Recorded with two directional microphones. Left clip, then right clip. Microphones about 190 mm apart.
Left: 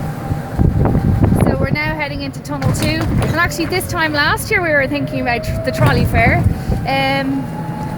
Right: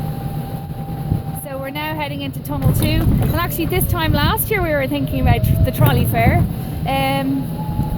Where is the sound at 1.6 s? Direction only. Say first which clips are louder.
Left 4 dB; 5° right (ahead or behind).